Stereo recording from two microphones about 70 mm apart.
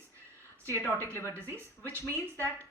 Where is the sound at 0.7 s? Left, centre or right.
Right.